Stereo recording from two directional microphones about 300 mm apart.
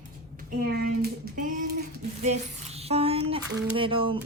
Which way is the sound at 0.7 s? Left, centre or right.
Right.